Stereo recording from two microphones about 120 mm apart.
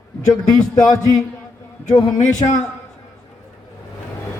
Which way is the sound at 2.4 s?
40° left (ahead or behind).